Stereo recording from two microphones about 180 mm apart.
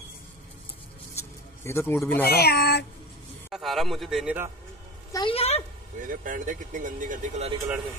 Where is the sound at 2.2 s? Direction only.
60° left (ahead or behind).